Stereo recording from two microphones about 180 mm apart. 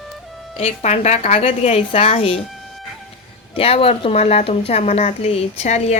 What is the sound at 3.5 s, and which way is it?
A woman's voice, 30° left (ahead or behind).